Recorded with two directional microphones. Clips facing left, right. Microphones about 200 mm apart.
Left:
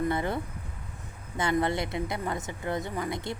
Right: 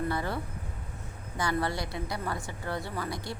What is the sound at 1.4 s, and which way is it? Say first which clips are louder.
A woman's voice: left 4 dB; 20° left (ahead or behind).